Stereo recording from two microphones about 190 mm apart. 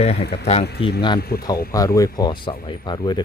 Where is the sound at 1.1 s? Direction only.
55° left (ahead or behind).